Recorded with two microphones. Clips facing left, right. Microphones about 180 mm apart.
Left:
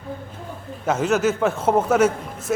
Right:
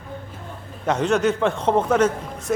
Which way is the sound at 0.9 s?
5° left (ahead or behind).